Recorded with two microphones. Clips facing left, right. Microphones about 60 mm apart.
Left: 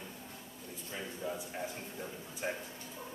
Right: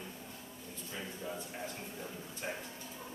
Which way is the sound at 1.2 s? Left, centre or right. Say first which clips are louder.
Left 4 dB; centre.